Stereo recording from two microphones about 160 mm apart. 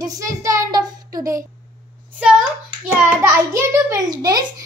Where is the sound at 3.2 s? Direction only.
20° right (ahead or behind).